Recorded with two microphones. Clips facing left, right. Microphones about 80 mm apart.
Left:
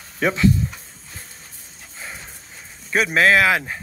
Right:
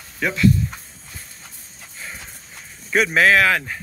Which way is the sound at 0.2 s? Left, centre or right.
Left.